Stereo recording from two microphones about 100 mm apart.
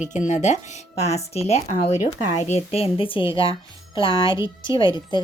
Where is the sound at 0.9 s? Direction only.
90° left.